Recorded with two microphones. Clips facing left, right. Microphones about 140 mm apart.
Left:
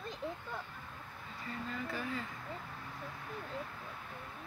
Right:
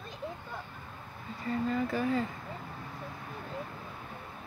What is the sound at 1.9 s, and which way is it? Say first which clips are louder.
Speech: right 10 dB; 45° right (ahead or behind).